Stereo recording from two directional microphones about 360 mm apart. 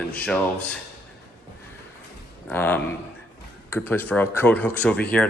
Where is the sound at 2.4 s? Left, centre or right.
Centre.